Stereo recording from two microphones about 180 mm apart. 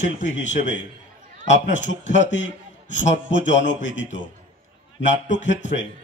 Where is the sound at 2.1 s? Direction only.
90° left.